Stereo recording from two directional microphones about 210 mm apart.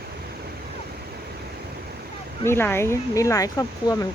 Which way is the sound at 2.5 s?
10° left (ahead or behind).